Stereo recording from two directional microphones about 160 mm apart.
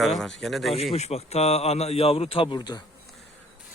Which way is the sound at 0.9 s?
40° left (ahead or behind).